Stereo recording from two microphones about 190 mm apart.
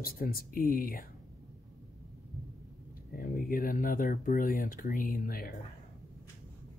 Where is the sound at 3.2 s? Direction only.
50° left (ahead or behind).